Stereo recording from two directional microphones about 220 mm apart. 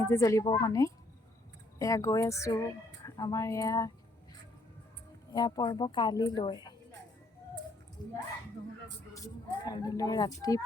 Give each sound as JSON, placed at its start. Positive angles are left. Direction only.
{"t": 0.0, "sound": "speech", "side_deg": 10}
{"t": 5.3, "sound": "a woman's voice", "side_deg": 15}
{"t": 9.1, "sound": "speech", "side_deg": 15}